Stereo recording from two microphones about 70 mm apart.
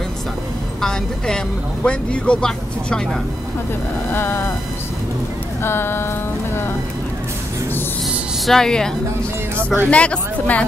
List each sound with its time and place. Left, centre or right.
0.7 s speech: centre
4.1 s speech: left
5.6 s speech: left
8.5 s speech: centre